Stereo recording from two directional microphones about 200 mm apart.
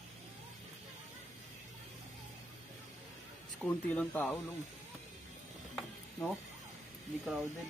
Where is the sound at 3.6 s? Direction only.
5° left (ahead or behind).